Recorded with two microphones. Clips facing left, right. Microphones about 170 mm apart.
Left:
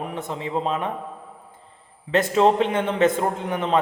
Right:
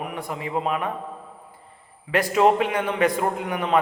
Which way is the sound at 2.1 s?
25° left (ahead or behind).